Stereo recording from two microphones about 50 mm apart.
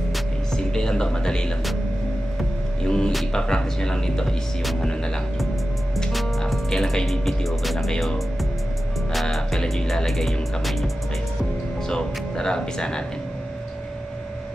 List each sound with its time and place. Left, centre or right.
0.5 s speech: centre
2.8 s speech: centre
6.5 s speech: centre
9.1 s speech: centre
11.9 s speech: centre